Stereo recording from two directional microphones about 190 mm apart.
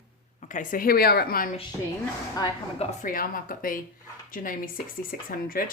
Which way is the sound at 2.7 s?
45° left (ahead or behind).